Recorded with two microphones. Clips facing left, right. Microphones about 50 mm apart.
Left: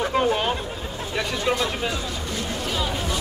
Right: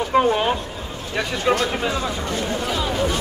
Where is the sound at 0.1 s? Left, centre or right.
Centre.